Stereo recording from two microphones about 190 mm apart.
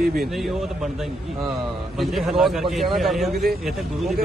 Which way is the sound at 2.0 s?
Centre (ahead or behind).